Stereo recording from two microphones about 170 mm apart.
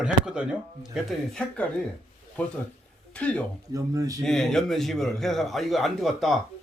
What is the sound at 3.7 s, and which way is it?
Speech, 20° right (ahead or behind).